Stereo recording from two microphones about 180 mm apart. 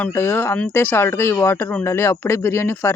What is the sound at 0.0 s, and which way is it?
Speech, 15° left (ahead or behind).